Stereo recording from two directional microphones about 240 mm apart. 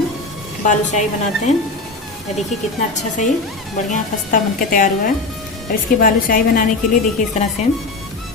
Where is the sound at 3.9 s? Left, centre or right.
Left.